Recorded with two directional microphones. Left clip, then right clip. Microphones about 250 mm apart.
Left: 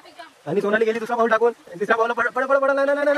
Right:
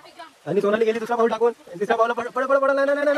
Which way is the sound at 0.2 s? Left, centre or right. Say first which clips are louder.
Right 1 dB; centre.